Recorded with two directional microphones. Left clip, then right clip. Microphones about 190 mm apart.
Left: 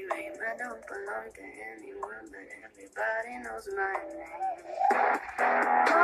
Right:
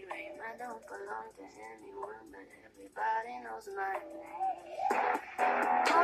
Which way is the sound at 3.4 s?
15° left (ahead or behind).